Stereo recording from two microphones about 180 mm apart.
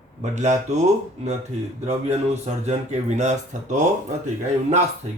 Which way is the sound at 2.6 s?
40° right (ahead or behind).